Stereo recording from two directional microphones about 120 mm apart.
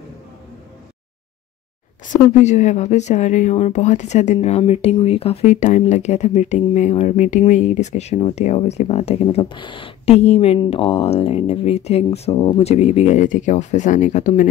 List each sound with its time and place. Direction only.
2.3 s speech: 75° left (ahead or behind)